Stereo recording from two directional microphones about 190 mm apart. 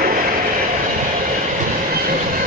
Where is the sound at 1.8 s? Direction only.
50° right (ahead or behind).